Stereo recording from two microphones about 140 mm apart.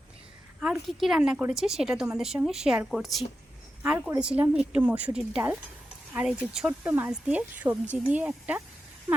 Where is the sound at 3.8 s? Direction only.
10° right (ahead or behind).